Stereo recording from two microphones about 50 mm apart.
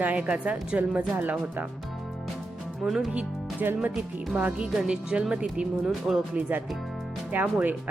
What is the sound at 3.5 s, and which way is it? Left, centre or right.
Speech, right.